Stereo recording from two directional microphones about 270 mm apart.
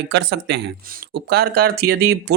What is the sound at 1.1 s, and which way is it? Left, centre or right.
Speech, right.